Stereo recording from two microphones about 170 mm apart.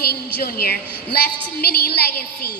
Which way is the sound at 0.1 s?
65° left (ahead or behind).